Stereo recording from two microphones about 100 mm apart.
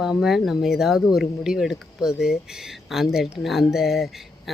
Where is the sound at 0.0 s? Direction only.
5° right (ahead or behind).